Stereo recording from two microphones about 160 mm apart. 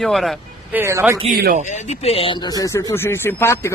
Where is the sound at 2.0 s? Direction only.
40° left (ahead or behind).